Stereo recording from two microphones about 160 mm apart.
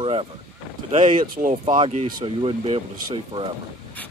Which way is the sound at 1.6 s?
35° right (ahead or behind).